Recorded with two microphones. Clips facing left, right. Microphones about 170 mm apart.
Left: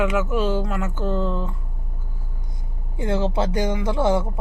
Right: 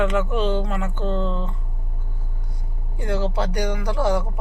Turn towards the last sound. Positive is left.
turn(degrees=25)  # may be behind; listen again after turning